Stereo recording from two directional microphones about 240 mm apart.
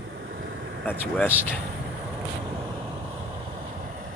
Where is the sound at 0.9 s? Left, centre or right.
Centre.